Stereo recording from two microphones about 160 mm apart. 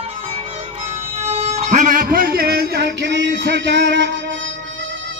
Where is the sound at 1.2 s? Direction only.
40° right (ahead or behind); by 4.0 s 90° right.